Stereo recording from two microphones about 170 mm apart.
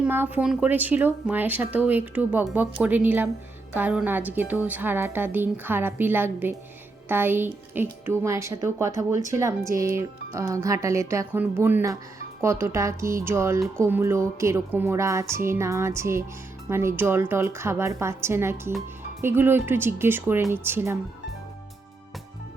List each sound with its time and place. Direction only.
0.0 s speech: 10° right (ahead or behind)